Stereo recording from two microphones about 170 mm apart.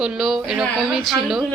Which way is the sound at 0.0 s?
5° right (ahead or behind).